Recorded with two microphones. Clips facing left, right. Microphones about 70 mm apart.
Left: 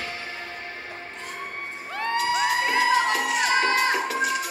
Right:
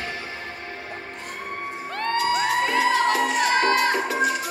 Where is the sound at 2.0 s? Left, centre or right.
Centre.